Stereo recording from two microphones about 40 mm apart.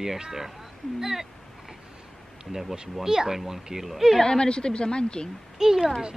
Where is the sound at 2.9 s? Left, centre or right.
Centre.